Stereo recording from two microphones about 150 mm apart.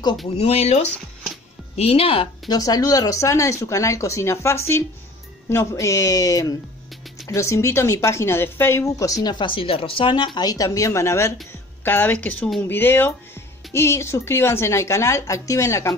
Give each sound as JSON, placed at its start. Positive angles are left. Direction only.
{"t": 0.4, "sound": "a woman's voice", "side_deg": 45}